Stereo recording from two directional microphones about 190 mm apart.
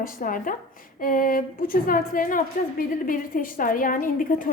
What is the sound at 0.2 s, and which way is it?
A woman's voice, 45° left (ahead or behind).